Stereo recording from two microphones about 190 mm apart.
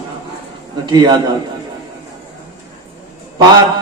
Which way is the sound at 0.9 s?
20° right (ahead or behind).